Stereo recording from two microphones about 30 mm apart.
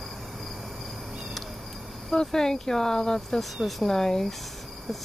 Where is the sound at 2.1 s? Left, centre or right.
Left.